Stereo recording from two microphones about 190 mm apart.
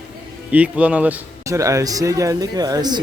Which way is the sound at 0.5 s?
5° right (ahead or behind).